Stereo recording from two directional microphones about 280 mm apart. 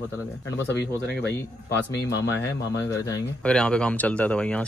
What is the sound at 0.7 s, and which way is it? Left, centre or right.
Speech, left.